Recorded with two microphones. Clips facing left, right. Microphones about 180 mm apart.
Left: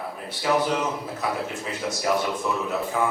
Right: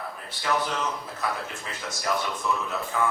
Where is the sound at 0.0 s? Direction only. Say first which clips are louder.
Left 5 dB; 15° left (ahead or behind).